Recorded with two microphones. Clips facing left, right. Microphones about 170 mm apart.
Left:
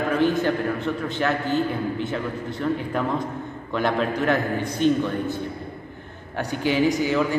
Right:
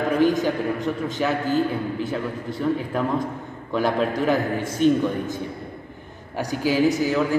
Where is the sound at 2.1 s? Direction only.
5° right (ahead or behind).